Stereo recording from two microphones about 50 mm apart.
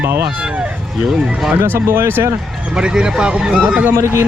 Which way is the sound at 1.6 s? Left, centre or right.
Right.